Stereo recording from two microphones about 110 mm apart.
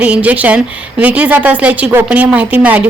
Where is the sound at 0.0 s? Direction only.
15° right (ahead or behind).